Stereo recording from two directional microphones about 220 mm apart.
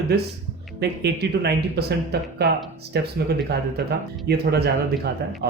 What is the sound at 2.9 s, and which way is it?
Speech, 45° right (ahead or behind).